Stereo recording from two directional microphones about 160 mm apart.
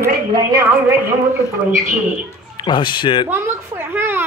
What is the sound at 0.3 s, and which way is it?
Speech, 25° right (ahead or behind).